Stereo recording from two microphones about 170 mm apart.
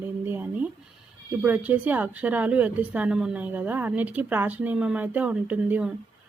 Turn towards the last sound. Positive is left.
turn(degrees=-10)  # may be behind; listen again after turning